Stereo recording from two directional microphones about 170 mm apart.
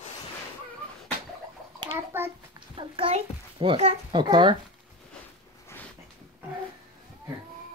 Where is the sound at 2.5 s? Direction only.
30° right (ahead or behind).